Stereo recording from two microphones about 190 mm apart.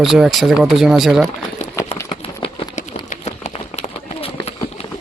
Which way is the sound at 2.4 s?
35° left (ahead or behind).